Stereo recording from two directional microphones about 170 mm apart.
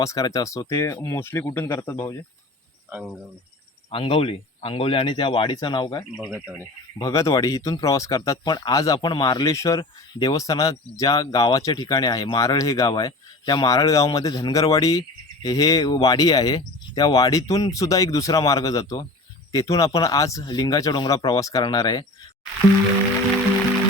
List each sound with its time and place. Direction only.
0.0 s speech: 20° left (ahead or behind)
2.9 s speech: centre (ahead or behind)
3.9 s speech: 35° left (ahead or behind)
6.3 s speech: 15° right (ahead or behind)
7.0 s speech: 20° left (ahead or behind)